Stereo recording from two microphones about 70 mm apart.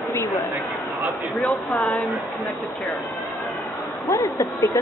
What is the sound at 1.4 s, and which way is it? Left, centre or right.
Speech, centre.